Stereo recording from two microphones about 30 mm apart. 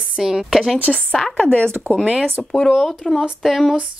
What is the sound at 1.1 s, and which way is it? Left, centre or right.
Speech, centre.